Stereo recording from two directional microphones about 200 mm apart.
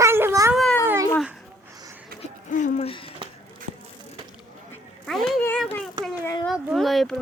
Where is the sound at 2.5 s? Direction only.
35° left (ahead or behind).